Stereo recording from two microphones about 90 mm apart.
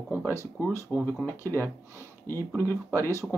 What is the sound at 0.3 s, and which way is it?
Speech, 30° left (ahead or behind).